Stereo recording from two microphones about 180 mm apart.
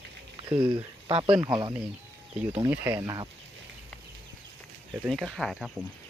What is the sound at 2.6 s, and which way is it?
Speech, 10° right (ahead or behind).